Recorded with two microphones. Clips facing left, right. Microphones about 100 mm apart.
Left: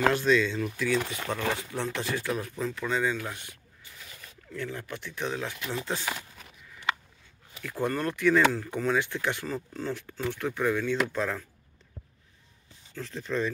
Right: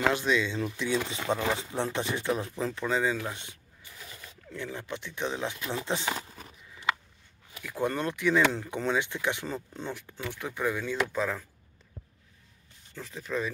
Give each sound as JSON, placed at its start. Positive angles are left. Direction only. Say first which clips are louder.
{"t": 0.0, "sound": "speech", "louder": "left 3 dB", "side_deg": -15}
{"t": 4.6, "sound": "speech", "louder": "left 1 dB", "side_deg": -20}
{"t": 7.6, "sound": "speech", "louder": "left 1 dB", "side_deg": -15}
{"t": 12.9, "sound": "speech", "louder": "left 2 dB", "side_deg": -10}